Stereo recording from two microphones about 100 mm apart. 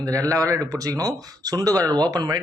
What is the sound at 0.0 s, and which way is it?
A man's voice, 35° right (ahead or behind).